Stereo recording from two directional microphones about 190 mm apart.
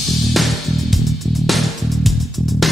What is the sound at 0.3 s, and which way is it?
Music, centre (ahead or behind).